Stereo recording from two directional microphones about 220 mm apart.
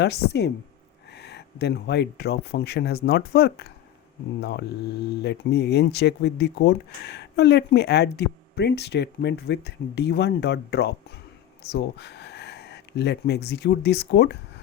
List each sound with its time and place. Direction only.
0.0 s speech: 50° left (ahead or behind)